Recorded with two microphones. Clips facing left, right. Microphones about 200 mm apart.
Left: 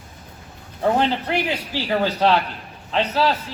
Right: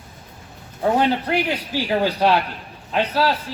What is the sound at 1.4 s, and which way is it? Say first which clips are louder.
Speech: right 1 dB; 10° right (ahead or behind).